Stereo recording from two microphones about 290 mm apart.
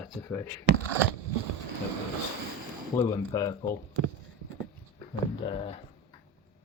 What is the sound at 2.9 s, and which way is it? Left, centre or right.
Speech, centre.